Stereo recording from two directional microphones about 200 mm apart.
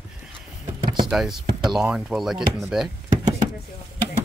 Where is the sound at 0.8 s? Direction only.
20° right (ahead or behind).